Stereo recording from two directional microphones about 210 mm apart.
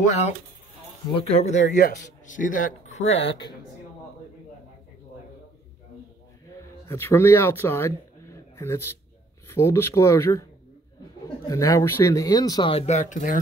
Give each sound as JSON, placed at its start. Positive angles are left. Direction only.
{"t": 1.1, "sound": "speech", "side_deg": 30}
{"t": 6.9, "sound": "speech", "side_deg": 10}
{"t": 11.4, "sound": "speech", "side_deg": 15}